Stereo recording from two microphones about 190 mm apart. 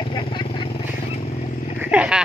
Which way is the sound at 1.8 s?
5° right (ahead or behind).